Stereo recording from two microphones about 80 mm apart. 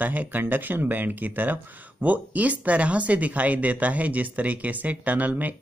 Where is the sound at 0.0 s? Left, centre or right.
Right.